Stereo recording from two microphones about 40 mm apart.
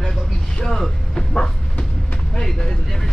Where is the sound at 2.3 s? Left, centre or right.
Centre.